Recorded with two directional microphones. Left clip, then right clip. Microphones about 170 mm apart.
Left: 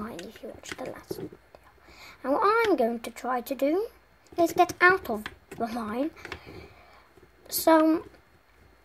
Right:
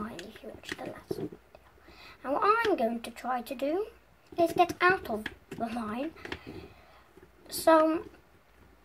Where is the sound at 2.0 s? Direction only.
40° left (ahead or behind).